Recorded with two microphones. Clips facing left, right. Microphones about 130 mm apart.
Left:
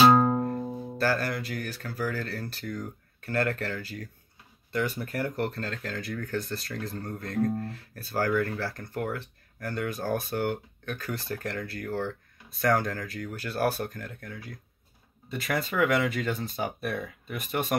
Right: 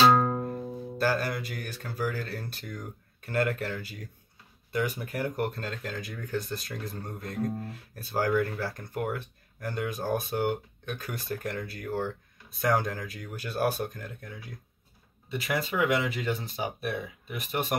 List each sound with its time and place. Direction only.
0.0 s music: 15° left (ahead or behind)
0.9 s speech: 15° right (ahead or behind)
15.2 s speech: 5° right (ahead or behind)